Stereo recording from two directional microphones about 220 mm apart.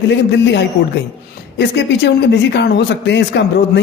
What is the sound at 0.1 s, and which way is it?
Speech, 50° left (ahead or behind).